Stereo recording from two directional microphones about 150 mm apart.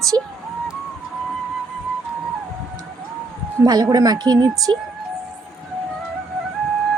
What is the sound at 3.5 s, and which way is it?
Speech, 25° right (ahead or behind).